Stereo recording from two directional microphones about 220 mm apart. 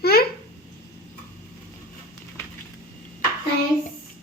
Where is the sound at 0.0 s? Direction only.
45° left (ahead or behind).